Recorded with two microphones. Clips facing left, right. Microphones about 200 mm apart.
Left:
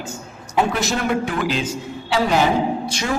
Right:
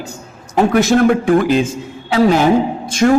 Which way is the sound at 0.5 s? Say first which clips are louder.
Right 8 dB; 50° right (ahead or behind).